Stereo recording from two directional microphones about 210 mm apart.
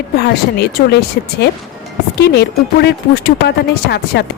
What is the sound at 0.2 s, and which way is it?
A woman's voice, 50° left (ahead or behind).